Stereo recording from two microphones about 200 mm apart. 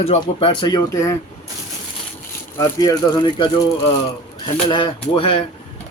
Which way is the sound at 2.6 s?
20° left (ahead or behind).